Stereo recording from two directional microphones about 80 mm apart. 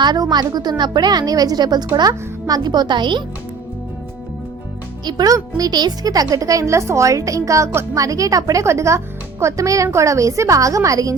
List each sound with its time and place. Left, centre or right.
0.0 s a woman's voice: right
5.0 s a child's voice: right